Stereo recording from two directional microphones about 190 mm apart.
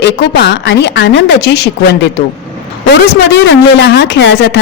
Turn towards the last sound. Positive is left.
turn(degrees=65)  # may be behind; listen again after turning